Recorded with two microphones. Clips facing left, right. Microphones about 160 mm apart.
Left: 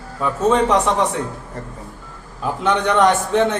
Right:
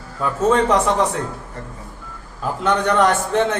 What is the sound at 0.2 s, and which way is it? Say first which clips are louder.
Speech: even; centre (ahead or behind).